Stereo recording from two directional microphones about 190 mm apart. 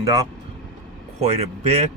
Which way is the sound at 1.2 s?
35° right (ahead or behind).